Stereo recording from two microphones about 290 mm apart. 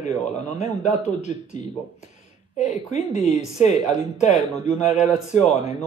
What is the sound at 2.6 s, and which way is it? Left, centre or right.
A woman's voice, left.